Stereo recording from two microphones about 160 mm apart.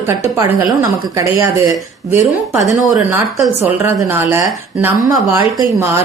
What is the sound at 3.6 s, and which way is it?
A woman's voice, 15° right (ahead or behind).